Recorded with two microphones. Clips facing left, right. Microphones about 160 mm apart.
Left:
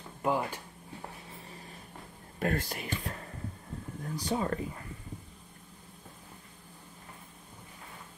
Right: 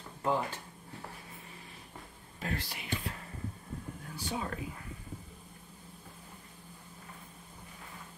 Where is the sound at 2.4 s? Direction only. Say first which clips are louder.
Left 7 dB; 50° left (ahead or behind).